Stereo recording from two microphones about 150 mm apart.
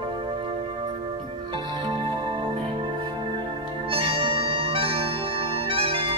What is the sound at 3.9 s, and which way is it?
Music, 35° right (ahead or behind).